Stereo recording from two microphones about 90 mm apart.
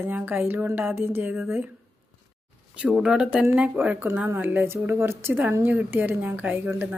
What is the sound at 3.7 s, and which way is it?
A woman's voice, 20° right (ahead or behind).